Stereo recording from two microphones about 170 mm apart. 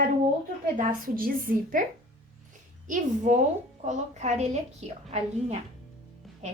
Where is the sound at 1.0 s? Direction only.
55° right (ahead or behind).